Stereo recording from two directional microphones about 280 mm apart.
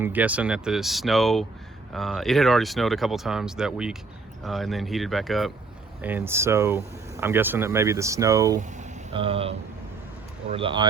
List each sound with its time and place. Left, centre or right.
0.0 s speech: centre
8.8 s a sound: centre
10.5 s speech: centre